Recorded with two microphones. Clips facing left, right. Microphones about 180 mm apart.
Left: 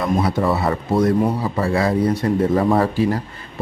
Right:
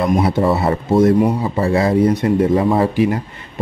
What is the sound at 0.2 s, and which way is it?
Speech, 25° right (ahead or behind).